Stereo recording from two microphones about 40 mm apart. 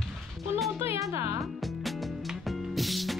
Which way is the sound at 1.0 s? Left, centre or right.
Centre.